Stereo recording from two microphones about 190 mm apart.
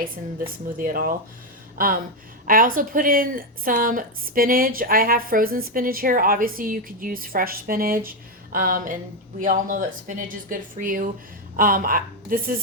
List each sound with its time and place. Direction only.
0.0 s a woman's voice: 50° right (ahead or behind)